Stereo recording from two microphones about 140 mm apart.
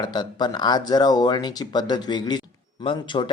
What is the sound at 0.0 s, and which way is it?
Speech, 30° left (ahead or behind).